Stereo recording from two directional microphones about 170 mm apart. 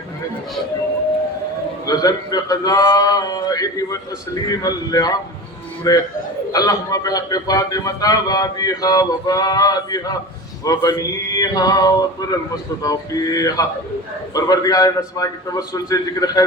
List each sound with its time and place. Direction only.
1.9 s a man's voice: 20° left (ahead or behind)